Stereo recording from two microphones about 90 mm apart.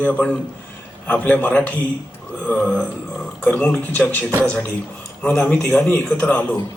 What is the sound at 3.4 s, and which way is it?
Speech, 10° left (ahead or behind).